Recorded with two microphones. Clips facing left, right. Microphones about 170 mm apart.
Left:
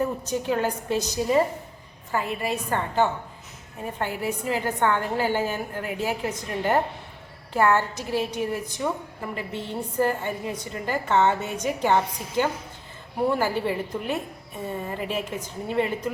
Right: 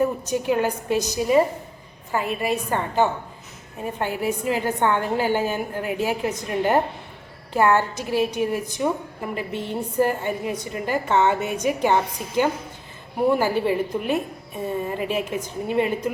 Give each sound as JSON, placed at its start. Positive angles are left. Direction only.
{"t": 0.0, "sound": "a woman's voice", "side_deg": -15}